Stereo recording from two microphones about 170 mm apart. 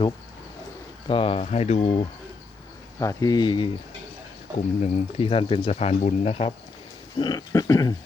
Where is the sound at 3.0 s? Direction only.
20° left (ahead or behind).